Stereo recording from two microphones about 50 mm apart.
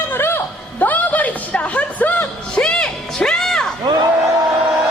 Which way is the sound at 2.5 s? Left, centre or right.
Centre.